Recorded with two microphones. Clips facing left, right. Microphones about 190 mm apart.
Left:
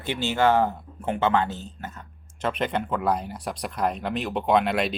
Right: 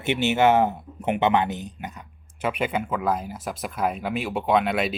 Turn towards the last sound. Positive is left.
turn(degrees=-5)  # may be behind; listen again after turning